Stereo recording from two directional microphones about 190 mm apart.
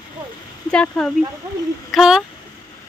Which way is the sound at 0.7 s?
5° left (ahead or behind).